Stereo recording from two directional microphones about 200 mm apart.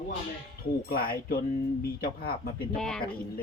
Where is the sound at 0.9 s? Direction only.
50° left (ahead or behind).